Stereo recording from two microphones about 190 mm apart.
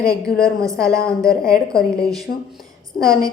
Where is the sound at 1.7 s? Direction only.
5° left (ahead or behind).